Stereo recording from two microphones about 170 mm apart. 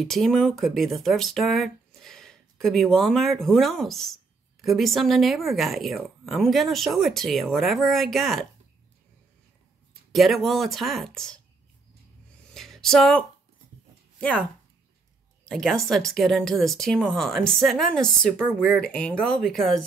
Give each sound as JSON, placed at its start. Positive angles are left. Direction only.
{"t": 0.0, "sound": "speech", "side_deg": 0}
{"t": 10.1, "sound": "speech", "side_deg": 0}
{"t": 12.4, "sound": "a sound", "side_deg": 0}
{"t": 15.4, "sound": "speech", "side_deg": 0}